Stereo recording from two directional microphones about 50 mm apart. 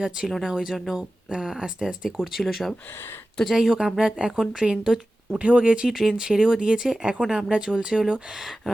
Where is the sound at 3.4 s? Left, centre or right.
Centre.